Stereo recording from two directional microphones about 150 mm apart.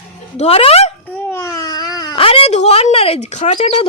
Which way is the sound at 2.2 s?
40° left (ahead or behind).